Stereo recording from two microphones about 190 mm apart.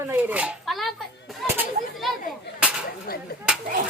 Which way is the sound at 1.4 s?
Centre (ahead or behind).